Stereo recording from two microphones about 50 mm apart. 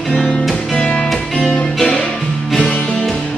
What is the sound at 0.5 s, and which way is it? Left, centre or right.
Music, left.